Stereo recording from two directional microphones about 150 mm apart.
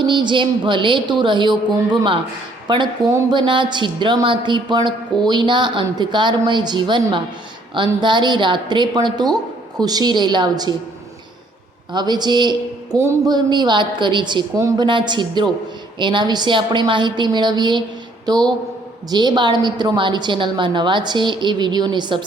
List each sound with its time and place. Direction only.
0.0 s a woman's voice: 30° right (ahead or behind)
11.9 s a woman's voice: 30° right (ahead or behind)
19.1 s a woman's voice: 30° right (ahead or behind)